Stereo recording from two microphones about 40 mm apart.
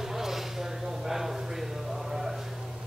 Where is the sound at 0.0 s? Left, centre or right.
Centre.